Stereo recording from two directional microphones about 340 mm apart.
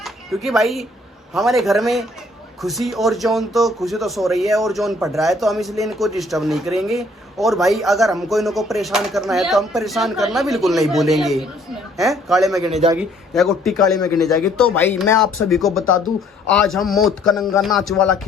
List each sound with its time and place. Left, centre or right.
0.0 s speech: centre
12.7 s a man's voice: centre
13.0 s speech: centre